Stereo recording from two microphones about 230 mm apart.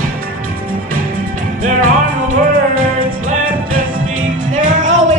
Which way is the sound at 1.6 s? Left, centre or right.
Right.